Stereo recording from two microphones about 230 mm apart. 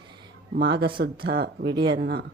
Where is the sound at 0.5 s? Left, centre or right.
Right.